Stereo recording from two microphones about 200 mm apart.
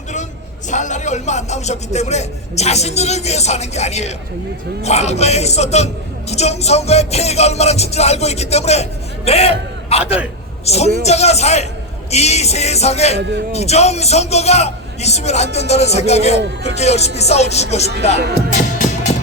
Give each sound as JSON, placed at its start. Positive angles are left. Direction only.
{"t": 0.7, "sound": "music", "side_deg": 35}
{"t": 18.2, "sound": "music", "side_deg": -55}
{"t": 18.5, "sound": "music", "side_deg": 35}